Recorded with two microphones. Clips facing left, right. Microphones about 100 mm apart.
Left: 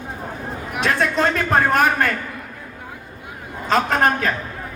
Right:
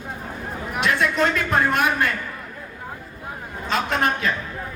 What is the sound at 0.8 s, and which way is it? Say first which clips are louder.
A man's voice: left 2 dB; 35° left (ahead or behind).